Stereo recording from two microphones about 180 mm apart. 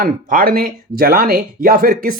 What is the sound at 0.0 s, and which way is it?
Speech, 55° right (ahead or behind).